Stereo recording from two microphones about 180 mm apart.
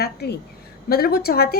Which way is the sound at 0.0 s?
65° left (ahead or behind).